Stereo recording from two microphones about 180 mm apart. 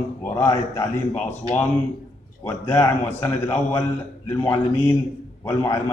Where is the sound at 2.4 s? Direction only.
10° left (ahead or behind).